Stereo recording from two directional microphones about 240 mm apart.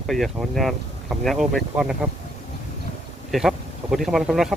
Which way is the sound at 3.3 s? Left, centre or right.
Centre.